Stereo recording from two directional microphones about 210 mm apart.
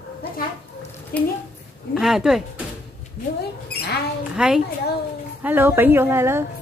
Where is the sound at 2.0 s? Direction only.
Centre (ahead or behind).